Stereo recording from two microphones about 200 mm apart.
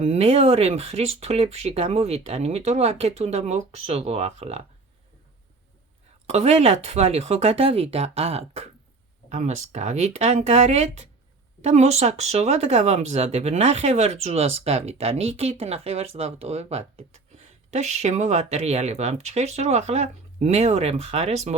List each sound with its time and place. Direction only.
0.0 s speech: 35° right (ahead or behind)
6.2 s speech: 30° right (ahead or behind)